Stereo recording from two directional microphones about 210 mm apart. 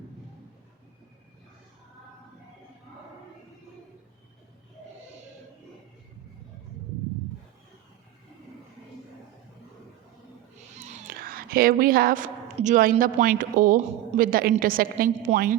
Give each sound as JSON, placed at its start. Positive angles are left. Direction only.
{"t": 10.8, "sound": "a woman's voice", "side_deg": -35}